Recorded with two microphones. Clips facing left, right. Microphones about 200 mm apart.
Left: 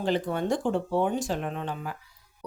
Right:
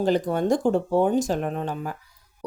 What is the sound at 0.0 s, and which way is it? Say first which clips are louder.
A woman's voice: right 5 dB; 40° right (ahead or behind).